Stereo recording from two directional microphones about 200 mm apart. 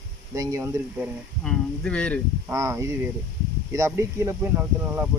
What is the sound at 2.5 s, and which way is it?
Speech, 15° right (ahead or behind).